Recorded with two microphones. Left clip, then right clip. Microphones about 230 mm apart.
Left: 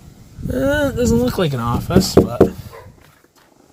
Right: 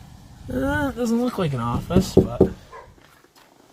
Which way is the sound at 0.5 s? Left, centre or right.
Centre.